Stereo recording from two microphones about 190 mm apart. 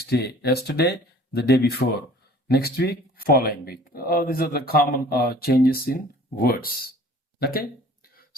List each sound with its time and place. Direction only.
0.0 s speech: 60° left (ahead or behind)